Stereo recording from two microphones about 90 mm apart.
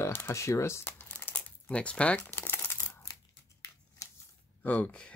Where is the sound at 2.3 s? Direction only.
25° left (ahead or behind).